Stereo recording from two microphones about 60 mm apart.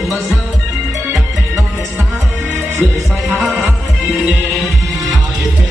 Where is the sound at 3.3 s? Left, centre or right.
Right.